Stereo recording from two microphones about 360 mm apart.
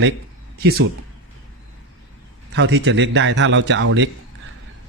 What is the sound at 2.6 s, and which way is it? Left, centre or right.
A man's voice, right.